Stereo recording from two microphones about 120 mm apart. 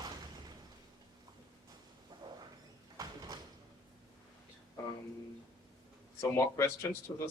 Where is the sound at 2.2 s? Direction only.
35° right (ahead or behind).